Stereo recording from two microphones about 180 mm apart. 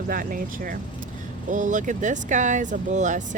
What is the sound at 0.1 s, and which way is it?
Speech, 50° right (ahead or behind).